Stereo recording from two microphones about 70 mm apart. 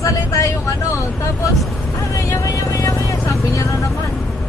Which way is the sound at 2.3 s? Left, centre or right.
Left.